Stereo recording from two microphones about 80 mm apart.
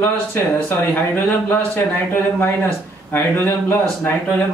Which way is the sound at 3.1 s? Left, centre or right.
Left.